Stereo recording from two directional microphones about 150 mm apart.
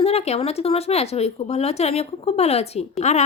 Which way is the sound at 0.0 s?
45° left (ahead or behind).